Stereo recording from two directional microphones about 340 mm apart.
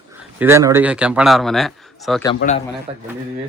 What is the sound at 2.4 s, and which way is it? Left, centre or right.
Speech, left.